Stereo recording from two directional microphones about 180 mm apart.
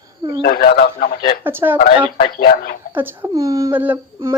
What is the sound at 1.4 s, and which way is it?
Speech, 10° right (ahead or behind).